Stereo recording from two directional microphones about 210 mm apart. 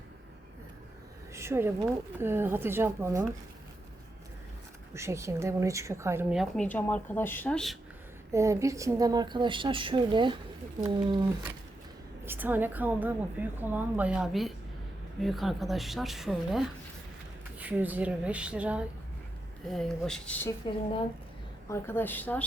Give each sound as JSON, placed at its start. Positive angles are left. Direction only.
{"t": 1.3, "sound": "a sound", "side_deg": -10}
{"t": 2.1, "sound": "a woman's voice", "side_deg": -10}
{"t": 4.9, "sound": "a woman's voice", "side_deg": -15}
{"t": 8.3, "sound": "a woman's voice", "side_deg": -15}
{"t": 12.2, "sound": "a woman's voice", "side_deg": -10}
{"t": 21.7, "sound": "a woman's voice", "side_deg": 10}